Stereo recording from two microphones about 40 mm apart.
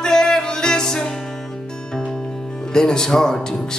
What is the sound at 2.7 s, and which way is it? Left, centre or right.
Speech, centre.